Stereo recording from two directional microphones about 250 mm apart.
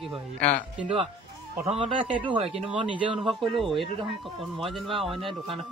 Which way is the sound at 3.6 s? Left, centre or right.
Centre.